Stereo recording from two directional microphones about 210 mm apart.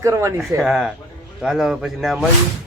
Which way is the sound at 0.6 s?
Centre (ahead or behind).